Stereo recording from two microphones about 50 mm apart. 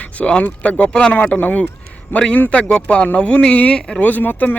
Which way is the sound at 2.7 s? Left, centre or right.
Left.